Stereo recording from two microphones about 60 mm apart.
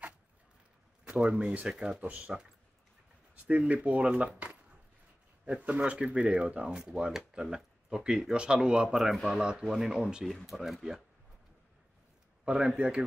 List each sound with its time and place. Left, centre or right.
1.7 s speech: centre
2.0 s speech: right
3.4 s speech: right; by 9.4 s centre
9.4 s speech: centre
9.8 s speech: centre
12.4 s speech: centre